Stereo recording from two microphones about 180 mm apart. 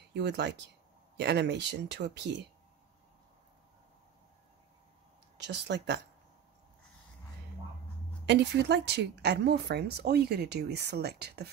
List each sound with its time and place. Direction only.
0.1 s speech: 70° right (ahead or behind)
5.5 s speech: 70° right (ahead or behind)
8.3 s speech: 70° right (ahead or behind)